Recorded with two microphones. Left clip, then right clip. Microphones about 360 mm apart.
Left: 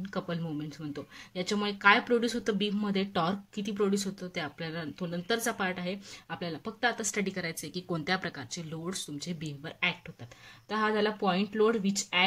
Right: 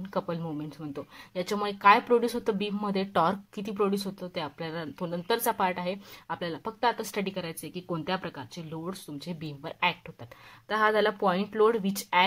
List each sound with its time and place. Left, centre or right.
0.1 s speech: centre